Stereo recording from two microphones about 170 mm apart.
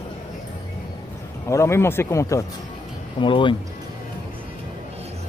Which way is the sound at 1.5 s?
15° left (ahead or behind).